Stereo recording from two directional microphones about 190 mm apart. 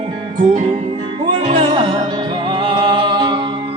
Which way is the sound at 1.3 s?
30° right (ahead or behind).